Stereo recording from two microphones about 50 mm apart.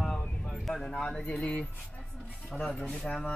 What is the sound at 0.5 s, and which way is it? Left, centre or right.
Speech, centre.